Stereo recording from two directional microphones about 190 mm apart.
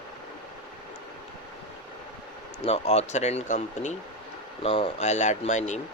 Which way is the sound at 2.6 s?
35° left (ahead or behind).